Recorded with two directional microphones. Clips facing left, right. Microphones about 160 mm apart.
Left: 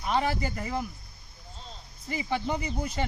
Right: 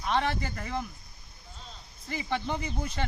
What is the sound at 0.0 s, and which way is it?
Speech, 5° left (ahead or behind).